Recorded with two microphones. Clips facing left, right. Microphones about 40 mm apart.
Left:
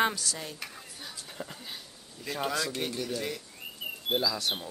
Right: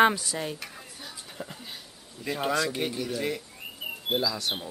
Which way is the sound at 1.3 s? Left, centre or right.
Centre.